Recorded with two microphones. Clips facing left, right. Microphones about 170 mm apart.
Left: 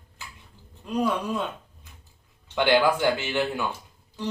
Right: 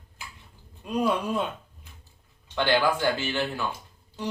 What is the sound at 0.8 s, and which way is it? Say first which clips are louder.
Speech: even; 15° right (ahead or behind).